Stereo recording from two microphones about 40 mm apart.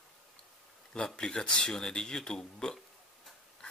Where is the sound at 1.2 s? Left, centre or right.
Centre.